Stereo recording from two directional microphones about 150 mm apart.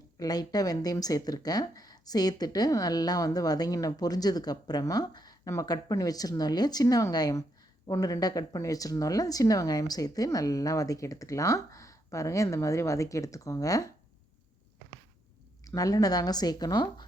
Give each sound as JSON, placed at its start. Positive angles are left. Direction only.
{"t": 0.2, "sound": "speech", "side_deg": 25}
{"t": 15.6, "sound": "speech", "side_deg": 25}